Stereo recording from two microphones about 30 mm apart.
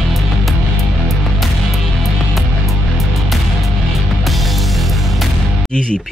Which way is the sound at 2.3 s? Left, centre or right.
Centre.